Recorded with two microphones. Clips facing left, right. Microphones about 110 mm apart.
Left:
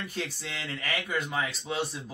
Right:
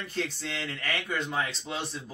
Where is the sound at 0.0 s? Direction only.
10° left (ahead or behind).